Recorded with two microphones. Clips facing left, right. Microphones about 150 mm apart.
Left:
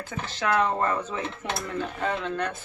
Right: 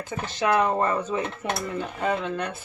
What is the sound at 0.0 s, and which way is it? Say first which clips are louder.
Speech: right 3 dB; 15° right (ahead or behind).